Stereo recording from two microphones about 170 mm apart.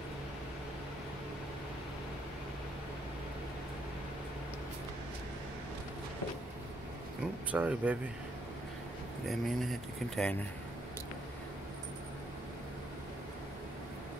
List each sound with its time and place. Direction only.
7.5 s speech: 10° right (ahead or behind)
9.3 s speech: centre (ahead or behind)